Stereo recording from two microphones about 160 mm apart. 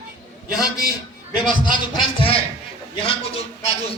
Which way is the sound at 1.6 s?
30° left (ahead or behind).